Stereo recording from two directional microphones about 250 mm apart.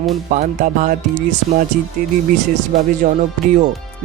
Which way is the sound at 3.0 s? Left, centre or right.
Right.